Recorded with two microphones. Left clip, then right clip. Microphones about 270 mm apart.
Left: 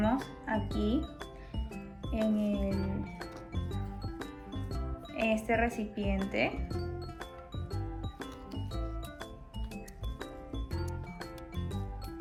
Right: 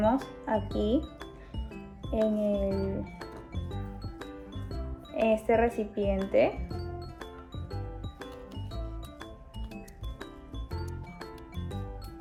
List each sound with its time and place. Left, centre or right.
0.0 s music: centre